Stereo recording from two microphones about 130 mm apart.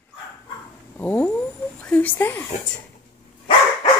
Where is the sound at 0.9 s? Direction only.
15° left (ahead or behind).